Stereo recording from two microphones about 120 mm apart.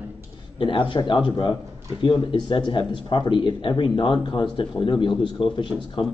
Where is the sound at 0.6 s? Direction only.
45° left (ahead or behind).